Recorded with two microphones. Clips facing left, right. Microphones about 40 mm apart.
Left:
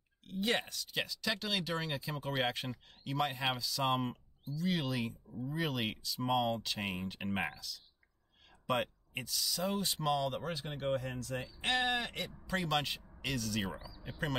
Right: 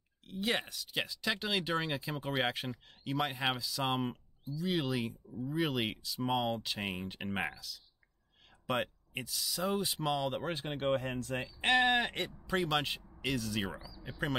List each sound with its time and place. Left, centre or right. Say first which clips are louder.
0.3 s speech: even; centre
8.6 s speech: even; centre
10.4 s speech: right 3 dB; right
12.4 s speech: right 2 dB; centre
13.7 s speech: right 1 dB; left